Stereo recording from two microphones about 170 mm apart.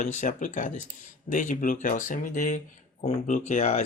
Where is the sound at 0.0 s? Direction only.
45° left (ahead or behind).